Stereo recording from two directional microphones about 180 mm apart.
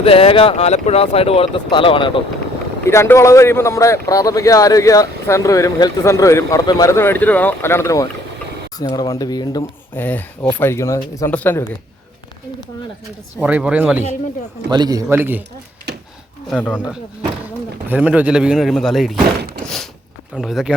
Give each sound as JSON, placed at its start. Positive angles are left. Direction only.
{"t": 0.0, "sound": "speech", "side_deg": 30}
{"t": 2.8, "sound": "speech", "side_deg": 15}
{"t": 9.9, "sound": "speech", "side_deg": 10}
{"t": 13.4, "sound": "speech", "side_deg": -5}
{"t": 14.7, "sound": "a man's voice", "side_deg": -20}
{"t": 15.1, "sound": "speech", "side_deg": -10}
{"t": 16.5, "sound": "speech", "side_deg": 10}
{"t": 17.8, "sound": "speech", "side_deg": -10}
{"t": 19.6, "sound": "a sound", "side_deg": 0}
{"t": 20.3, "sound": "speech", "side_deg": 0}